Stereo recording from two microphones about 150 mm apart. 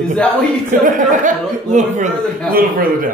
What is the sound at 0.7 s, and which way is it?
Speech, 65° right (ahead or behind).